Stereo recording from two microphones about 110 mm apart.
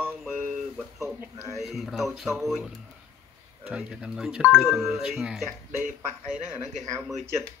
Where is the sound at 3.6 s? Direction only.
10° right (ahead or behind).